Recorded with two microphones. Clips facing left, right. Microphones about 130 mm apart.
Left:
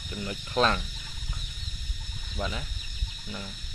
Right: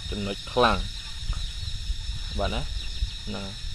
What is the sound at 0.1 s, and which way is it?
Speech, 15° right (ahead or behind).